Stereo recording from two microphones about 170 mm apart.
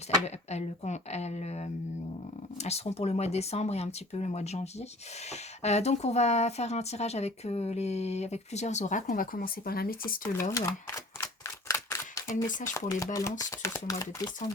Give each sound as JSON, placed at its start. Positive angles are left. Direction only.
{"t": 0.3, "sound": "speech", "side_deg": 40}
{"t": 10.5, "sound": "camera", "side_deg": 20}
{"t": 12.5, "sound": "speech", "side_deg": 50}
{"t": 12.7, "sound": "speech", "side_deg": 20}